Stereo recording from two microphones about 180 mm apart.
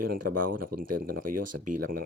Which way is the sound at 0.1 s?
55° right (ahead or behind).